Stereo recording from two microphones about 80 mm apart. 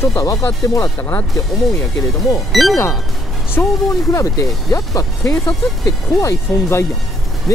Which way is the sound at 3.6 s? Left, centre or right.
Left.